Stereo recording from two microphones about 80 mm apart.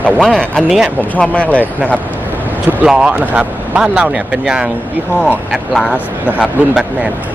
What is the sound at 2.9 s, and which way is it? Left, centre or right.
Speech, centre.